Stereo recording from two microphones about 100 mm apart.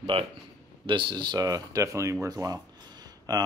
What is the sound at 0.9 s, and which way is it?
Speech, 55° right (ahead or behind).